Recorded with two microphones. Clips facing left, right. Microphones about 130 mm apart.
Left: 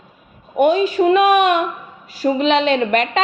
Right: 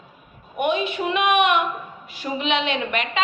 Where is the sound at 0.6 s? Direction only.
40° left (ahead or behind).